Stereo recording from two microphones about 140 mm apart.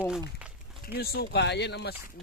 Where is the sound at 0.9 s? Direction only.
90° left.